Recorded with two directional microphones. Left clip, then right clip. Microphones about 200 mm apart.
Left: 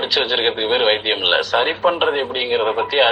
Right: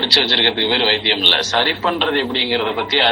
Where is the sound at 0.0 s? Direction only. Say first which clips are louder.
Right 4 dB; 20° right (ahead or behind).